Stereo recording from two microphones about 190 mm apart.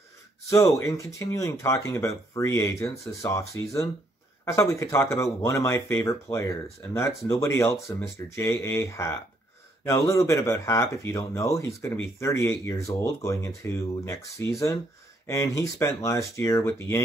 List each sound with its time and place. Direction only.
0.5 s speech: 15° left (ahead or behind)